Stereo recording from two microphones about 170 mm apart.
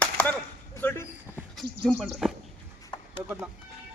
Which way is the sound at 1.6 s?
Centre (ahead or behind).